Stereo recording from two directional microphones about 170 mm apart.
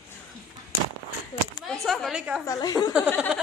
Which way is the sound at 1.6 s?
Centre (ahead or behind).